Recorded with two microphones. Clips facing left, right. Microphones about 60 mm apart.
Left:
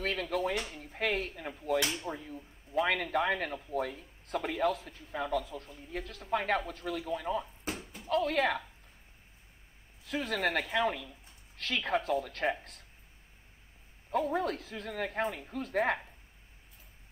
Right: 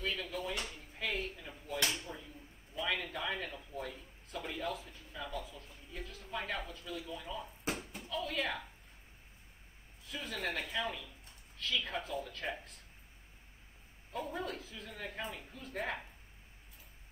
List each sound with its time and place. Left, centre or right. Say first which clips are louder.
0.0 s a sound: left 7 dB; left
2.0 s speech: left 8 dB; left
7.6 s a sound: even; centre
8.1 s speech: left 9 dB; left
10.0 s speech: left 8 dB; left
14.1 s speech: left 9 dB; left